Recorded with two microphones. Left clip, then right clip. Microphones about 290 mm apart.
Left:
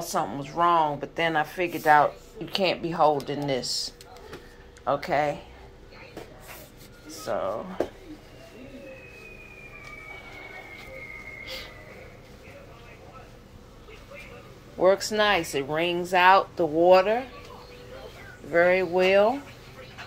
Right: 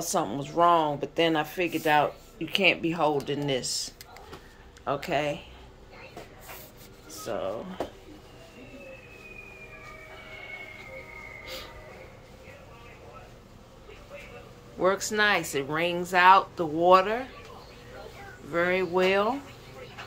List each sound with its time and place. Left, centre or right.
0.0 s speech: centre
2.5 s speech: right
2.8 s speech: centre
4.8 s speech: centre
7.1 s speech: centre
14.8 s speech: centre
18.5 s speech: centre